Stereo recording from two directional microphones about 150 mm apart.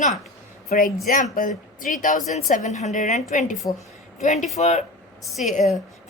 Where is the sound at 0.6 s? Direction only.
70° left (ahead or behind).